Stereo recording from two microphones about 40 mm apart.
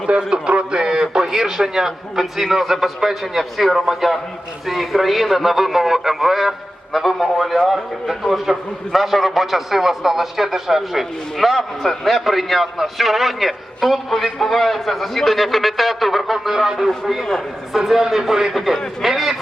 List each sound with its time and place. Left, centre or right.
0.1 s a man's voice: right; by 16.4 s centre
16.5 s a man's voice: centre